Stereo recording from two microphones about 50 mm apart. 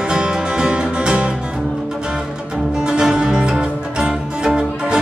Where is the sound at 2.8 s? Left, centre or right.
Centre.